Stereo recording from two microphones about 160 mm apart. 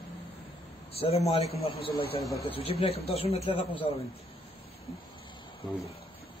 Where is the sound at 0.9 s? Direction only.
40° left (ahead or behind).